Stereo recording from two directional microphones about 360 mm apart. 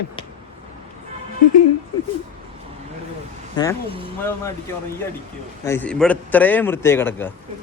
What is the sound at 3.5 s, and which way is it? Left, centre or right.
Speech, centre.